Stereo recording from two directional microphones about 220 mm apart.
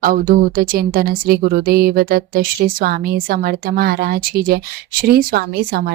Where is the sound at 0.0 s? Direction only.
40° right (ahead or behind).